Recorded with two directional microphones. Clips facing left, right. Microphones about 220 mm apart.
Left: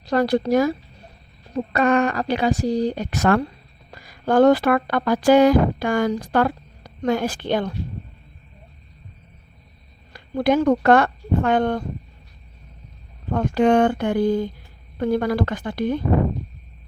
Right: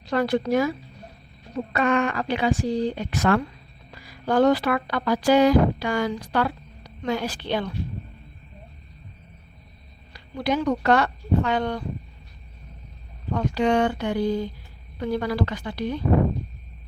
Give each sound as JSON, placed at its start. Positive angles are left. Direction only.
{"t": 0.0, "sound": "a woman's voice", "side_deg": 40}
{"t": 10.1, "sound": "speech", "side_deg": 50}
{"t": 13.3, "sound": "speech", "side_deg": 50}